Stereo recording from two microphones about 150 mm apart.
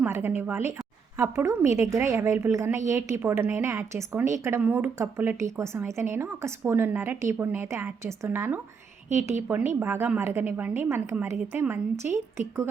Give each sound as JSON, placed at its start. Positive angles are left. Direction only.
{"t": 0.0, "sound": "a woman's voice", "side_deg": -15}